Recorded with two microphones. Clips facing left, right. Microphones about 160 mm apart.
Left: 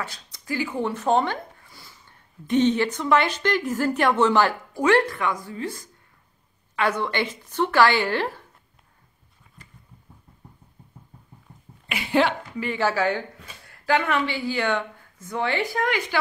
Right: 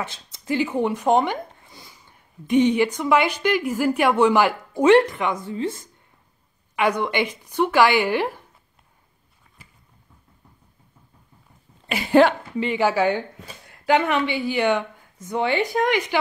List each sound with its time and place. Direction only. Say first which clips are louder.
0.0 s speech: right 3 dB; 25° right (ahead or behind)
11.9 s speech: right 6 dB; 45° right (ahead or behind)
12.5 s speech: right 3 dB; 20° right (ahead or behind)